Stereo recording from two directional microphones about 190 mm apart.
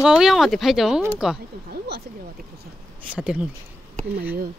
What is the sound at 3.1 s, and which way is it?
Speech, 5° right (ahead or behind).